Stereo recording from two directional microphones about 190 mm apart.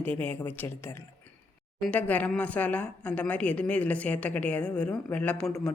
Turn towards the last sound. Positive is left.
turn(degrees=5)  # may be behind; listen again after turning